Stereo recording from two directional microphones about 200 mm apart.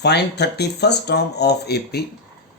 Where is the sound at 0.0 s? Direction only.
55° left (ahead or behind).